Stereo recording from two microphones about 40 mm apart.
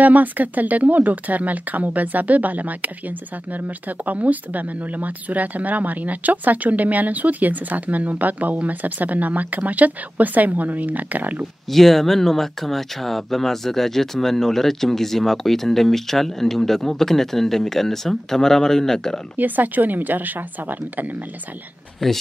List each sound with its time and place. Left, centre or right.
0.0 s speech: right
11.7 s speech: centre
19.3 s speech: right